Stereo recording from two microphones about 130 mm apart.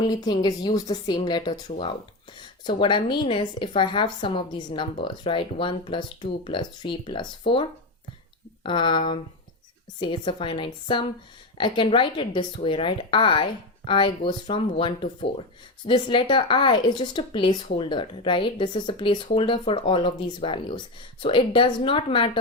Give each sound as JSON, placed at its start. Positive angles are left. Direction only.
{"t": 0.0, "sound": "a woman's voice", "side_deg": 30}
{"t": 8.6, "sound": "a woman's voice", "side_deg": 40}